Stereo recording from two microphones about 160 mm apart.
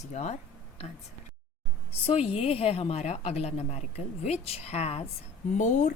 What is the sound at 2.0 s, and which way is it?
Speech, 40° left (ahead or behind).